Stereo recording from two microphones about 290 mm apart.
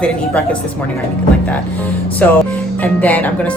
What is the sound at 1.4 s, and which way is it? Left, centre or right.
Speech, centre.